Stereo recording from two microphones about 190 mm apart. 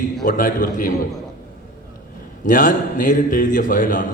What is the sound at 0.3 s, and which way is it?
Speech, 45° left (ahead or behind).